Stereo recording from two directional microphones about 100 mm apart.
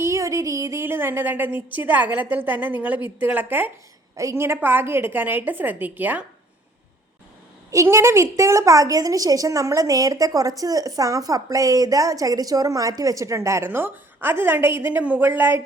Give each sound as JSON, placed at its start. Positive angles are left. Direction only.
{"t": 0.0, "sound": "a woman's voice", "side_deg": -30}
{"t": 4.2, "sound": "a woman's voice", "side_deg": -30}
{"t": 7.7, "sound": "a woman's voice", "side_deg": -30}